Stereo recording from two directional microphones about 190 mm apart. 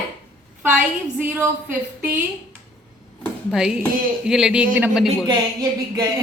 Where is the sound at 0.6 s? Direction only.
10° right (ahead or behind).